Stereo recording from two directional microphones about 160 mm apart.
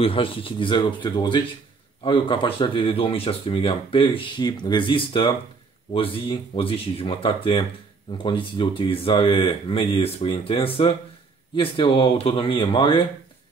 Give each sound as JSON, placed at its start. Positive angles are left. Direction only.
{"t": 0.0, "sound": "speech", "side_deg": 35}